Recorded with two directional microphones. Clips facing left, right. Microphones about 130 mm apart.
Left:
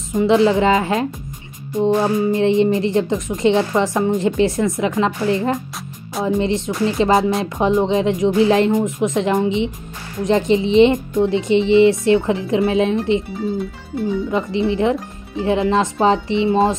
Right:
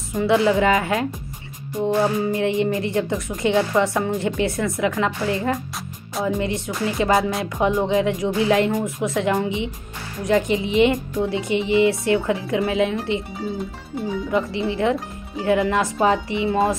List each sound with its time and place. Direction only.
0.1 s speech: 20° left (ahead or behind)
14.3 s speech: 20° left (ahead or behind)